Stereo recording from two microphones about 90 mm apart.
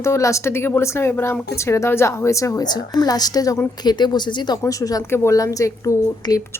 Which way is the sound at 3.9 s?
55° left (ahead or behind).